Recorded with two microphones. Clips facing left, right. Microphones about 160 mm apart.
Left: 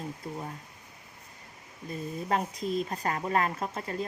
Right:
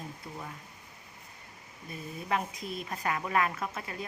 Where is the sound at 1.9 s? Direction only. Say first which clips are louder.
Left 3 dB; 35° left (ahead or behind).